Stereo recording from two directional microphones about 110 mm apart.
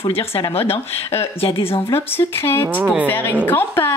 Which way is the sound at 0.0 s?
60° left (ahead or behind).